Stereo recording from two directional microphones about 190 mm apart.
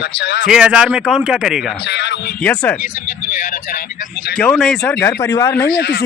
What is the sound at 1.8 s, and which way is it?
Speech, 65° left (ahead or behind).